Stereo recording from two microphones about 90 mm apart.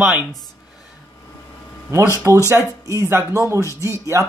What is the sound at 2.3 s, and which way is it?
Speech, 35° right (ahead or behind).